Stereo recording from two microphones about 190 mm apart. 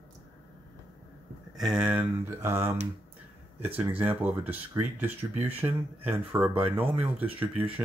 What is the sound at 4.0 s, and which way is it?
Speech, 10° right (ahead or behind).